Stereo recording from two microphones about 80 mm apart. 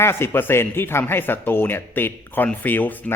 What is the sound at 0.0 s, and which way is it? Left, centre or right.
Speech, left.